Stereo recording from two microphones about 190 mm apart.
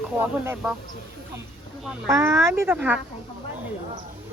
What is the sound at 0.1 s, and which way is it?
Speech, 10° right (ahead or behind).